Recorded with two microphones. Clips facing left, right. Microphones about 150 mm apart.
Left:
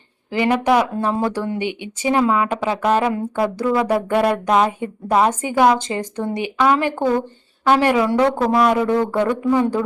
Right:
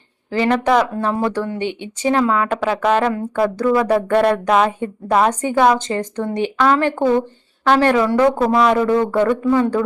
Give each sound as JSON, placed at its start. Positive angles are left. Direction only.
{"t": 0.3, "sound": "speech", "side_deg": 15}
{"t": 4.5, "sound": "a woman's voice", "side_deg": 20}
{"t": 9.2, "sound": "speech", "side_deg": 15}